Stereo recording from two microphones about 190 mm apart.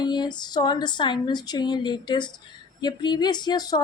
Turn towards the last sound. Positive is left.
turn(degrees=20)  # may be behind; listen again after turning